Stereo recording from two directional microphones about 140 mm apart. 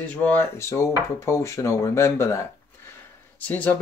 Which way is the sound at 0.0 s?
10° left (ahead or behind).